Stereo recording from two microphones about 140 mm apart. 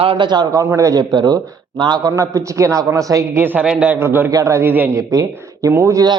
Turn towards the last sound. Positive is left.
turn(degrees=-25)  # may be behind; listen again after turning